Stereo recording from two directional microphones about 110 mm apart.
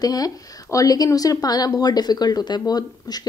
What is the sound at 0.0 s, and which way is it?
A woman's voice, 35° left (ahead or behind).